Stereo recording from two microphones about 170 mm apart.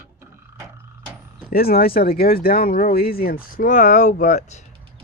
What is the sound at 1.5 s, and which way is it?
Speech, 65° left (ahead or behind).